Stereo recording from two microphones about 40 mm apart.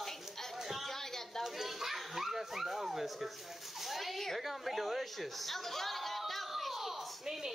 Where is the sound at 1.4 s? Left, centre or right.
Centre.